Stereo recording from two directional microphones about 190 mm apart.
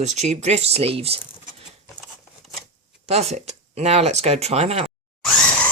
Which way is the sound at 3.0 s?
35° right (ahead or behind).